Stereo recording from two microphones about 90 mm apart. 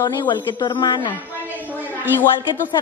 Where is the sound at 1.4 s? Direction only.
20° right (ahead or behind).